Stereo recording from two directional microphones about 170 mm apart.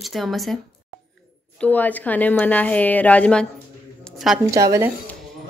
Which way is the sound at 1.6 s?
10° left (ahead or behind).